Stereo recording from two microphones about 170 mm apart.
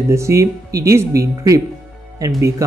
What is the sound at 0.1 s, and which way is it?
Speech, 15° right (ahead or behind).